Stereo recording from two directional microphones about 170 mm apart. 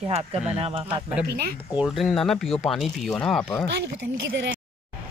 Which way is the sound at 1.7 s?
5° right (ahead or behind).